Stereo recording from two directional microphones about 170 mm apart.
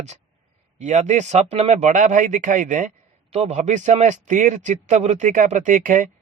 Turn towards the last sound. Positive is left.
turn(degrees=-50)  # may be behind; listen again after turning